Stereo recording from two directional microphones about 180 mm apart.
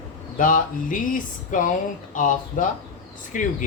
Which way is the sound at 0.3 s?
50° left (ahead or behind).